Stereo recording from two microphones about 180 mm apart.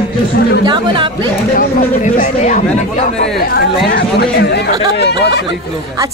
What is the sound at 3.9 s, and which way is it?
Speech, 70° left (ahead or behind).